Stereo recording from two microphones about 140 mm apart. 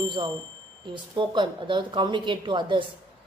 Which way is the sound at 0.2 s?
35° right (ahead or behind).